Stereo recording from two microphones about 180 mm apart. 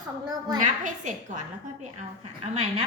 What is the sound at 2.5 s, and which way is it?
Speech, 35° right (ahead or behind).